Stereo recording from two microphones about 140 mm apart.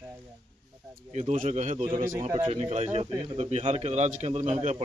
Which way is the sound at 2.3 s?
40° right (ahead or behind).